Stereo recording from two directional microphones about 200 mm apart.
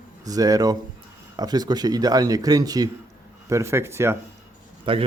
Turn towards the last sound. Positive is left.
turn(degrees=-25)  # may be behind; listen again after turning